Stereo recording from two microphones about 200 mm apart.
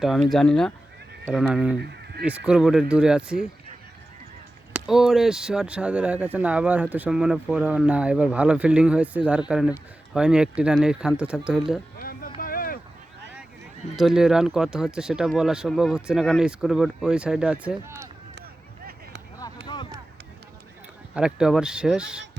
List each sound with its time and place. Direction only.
0.0 s speech: centre (ahead or behind)
1.8 s honk: 55° right (ahead or behind)
2.2 s speech: 5° right (ahead or behind)
4.7 s speech: centre (ahead or behind)
11.9 s a sound: 45° left (ahead or behind)
13.9 s speech: centre (ahead or behind)
19.6 s a sound: 20° left (ahead or behind)
21.2 s speech: 5° right (ahead or behind)